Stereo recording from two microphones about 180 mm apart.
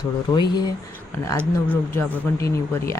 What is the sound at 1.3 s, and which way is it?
Speech, 10° left (ahead or behind).